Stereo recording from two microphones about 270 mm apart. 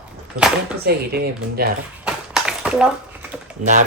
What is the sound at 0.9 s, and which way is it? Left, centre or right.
Speech, right.